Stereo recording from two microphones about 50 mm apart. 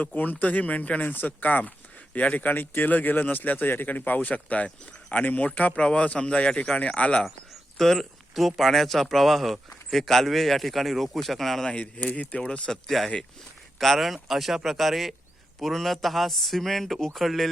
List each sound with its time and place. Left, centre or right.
0.0 s a man's voice: left
7.8 s speech: centre
11.6 s a man's voice: left
12.7 s speech: centre